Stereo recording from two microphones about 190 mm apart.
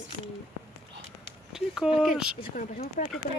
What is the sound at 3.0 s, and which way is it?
Speech, 45° left (ahead or behind).